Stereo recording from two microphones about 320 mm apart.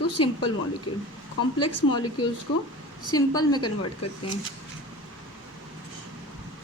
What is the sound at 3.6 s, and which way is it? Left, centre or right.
Speech, left.